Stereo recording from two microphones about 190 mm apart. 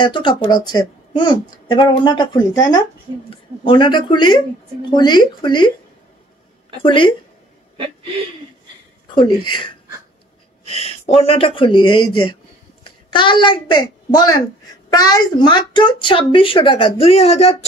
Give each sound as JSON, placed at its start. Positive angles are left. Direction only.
{"t": 0.0, "sound": "speech", "side_deg": 25}
{"t": 6.8, "sound": "speech", "side_deg": 25}
{"t": 9.1, "sound": "a woman's voice", "side_deg": 25}